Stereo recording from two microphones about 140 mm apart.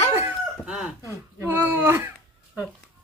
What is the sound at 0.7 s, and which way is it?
Speech, 5° right (ahead or behind).